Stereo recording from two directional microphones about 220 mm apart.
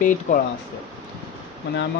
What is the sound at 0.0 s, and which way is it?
Speech, 35° left (ahead or behind).